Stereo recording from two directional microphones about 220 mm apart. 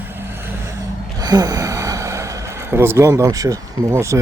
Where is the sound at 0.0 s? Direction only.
10° right (ahead or behind).